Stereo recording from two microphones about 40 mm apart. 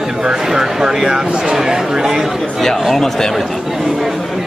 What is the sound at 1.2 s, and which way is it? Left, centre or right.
Speech, right.